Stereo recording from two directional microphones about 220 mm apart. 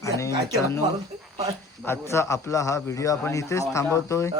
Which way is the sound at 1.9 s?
15° left (ahead or behind).